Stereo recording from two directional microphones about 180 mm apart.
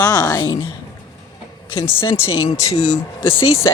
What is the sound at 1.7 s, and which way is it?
Speech, 15° left (ahead or behind).